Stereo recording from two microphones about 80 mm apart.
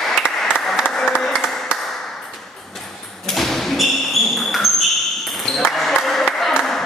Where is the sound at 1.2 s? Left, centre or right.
Centre.